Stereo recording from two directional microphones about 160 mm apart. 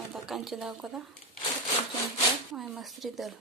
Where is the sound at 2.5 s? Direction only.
Centre (ahead or behind).